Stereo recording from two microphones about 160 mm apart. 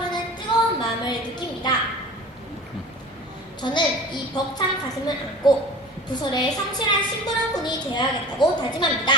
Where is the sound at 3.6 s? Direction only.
30° left (ahead or behind).